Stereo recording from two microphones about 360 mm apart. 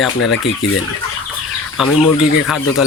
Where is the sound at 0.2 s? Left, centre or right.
Left.